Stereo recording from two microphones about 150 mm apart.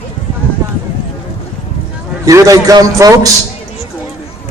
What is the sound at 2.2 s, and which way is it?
Speech, 20° right (ahead or behind).